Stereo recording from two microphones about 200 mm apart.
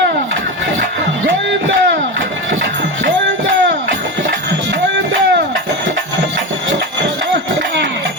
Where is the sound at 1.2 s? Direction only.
70° right (ahead or behind).